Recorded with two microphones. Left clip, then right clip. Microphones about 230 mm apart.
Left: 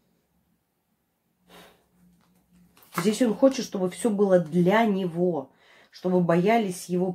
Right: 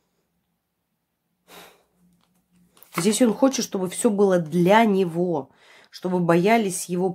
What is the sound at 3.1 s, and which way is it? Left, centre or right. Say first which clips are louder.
Speech: right 2 dB; right.